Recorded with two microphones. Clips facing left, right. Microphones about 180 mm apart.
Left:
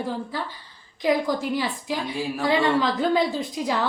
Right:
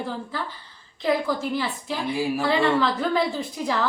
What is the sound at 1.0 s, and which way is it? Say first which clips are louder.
A woman's voice: left 1 dB; 15° left (ahead or behind).